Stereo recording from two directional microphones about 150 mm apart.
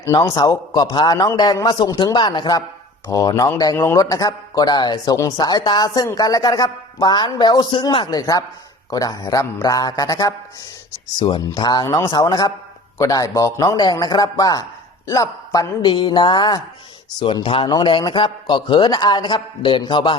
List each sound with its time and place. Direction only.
0.0 s a man's voice: 20° left (ahead or behind)
15.9 s a man's voice: 30° left (ahead or behind)